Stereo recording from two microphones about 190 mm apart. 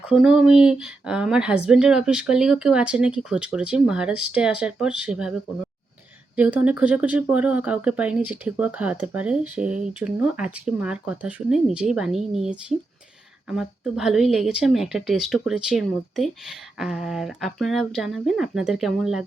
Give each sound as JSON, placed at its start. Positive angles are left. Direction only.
{"t": 0.1, "sound": "speech", "side_deg": -5}
{"t": 6.3, "sound": "speech", "side_deg": -5}